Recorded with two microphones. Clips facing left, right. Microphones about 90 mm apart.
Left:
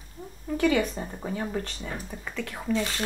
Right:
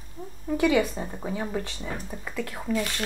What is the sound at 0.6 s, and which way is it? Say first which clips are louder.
Speech: right 1 dB; 15° right (ahead or behind).